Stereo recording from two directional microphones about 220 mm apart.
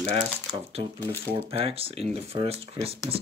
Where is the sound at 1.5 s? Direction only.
25° right (ahead or behind).